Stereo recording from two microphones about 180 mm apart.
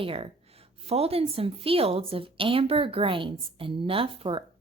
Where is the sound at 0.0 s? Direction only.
30° right (ahead or behind).